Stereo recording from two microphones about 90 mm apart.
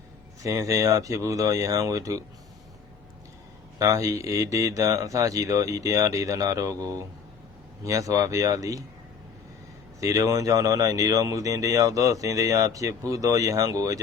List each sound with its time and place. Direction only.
0.4 s speech: 35° right (ahead or behind)
3.8 s speech: 35° right (ahead or behind)
10.0 s speech: 35° right (ahead or behind)